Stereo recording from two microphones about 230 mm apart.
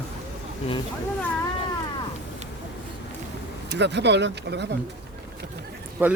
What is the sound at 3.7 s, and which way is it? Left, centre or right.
Speech, right.